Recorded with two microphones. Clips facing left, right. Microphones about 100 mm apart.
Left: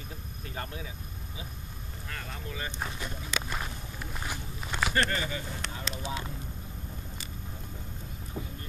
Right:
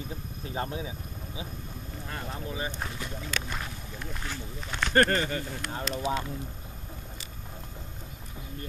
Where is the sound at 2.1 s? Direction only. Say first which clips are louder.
Right 4 dB; 25° right (ahead or behind).